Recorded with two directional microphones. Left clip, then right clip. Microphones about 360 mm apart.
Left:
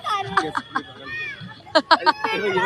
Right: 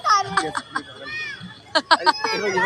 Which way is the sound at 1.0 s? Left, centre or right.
Right.